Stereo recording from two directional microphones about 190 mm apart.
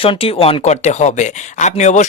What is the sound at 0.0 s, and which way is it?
Speech, 30° left (ahead or behind).